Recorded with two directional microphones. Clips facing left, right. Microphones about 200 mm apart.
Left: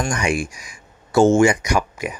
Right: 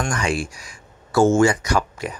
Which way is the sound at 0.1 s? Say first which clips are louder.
Left 2 dB; 15° left (ahead or behind).